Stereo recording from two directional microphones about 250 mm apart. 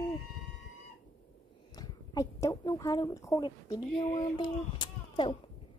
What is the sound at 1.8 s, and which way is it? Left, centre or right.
A woman's voice, centre.